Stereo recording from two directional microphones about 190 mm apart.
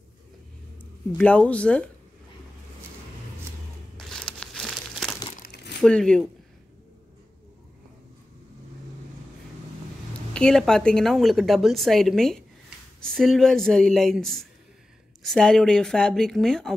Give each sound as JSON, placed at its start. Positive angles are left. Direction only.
{"t": 1.1, "sound": "speech", "side_deg": 5}
{"t": 3.9, "sound": "crumpling", "side_deg": 5}
{"t": 5.4, "sound": "crumpling", "side_deg": 60}
{"t": 5.8, "sound": "a woman's voice", "side_deg": 5}
{"t": 10.3, "sound": "a woman's voice", "side_deg": 5}